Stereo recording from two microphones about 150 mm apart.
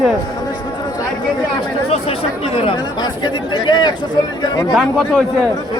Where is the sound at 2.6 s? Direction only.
35° left (ahead or behind).